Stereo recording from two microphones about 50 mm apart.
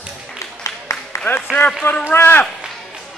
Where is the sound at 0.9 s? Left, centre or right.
Left.